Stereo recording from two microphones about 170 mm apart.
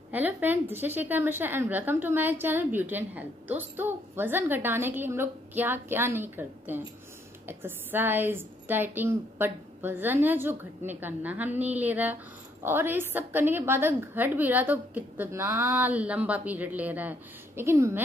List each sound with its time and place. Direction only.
0.1 s a woman's voice: 10° right (ahead or behind)